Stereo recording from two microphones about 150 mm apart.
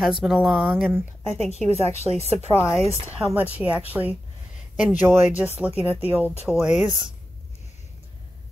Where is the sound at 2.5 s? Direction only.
15° left (ahead or behind).